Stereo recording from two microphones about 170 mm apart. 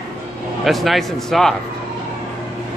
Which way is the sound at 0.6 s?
Centre (ahead or behind).